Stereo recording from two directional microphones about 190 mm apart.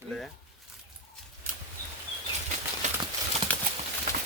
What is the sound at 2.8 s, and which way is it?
Clip-clop, 40° right (ahead or behind).